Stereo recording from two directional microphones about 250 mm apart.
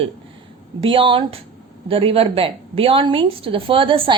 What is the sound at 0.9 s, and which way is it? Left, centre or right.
A woman's voice, right.